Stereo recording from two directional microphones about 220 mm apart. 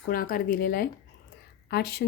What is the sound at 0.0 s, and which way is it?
Speech, 40° left (ahead or behind).